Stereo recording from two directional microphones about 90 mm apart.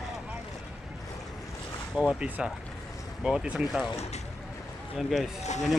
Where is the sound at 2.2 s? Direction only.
15° right (ahead or behind).